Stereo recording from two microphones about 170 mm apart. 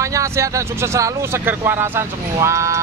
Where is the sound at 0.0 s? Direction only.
20° right (ahead or behind).